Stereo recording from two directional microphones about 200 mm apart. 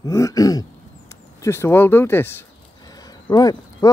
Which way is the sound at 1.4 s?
10° left (ahead or behind).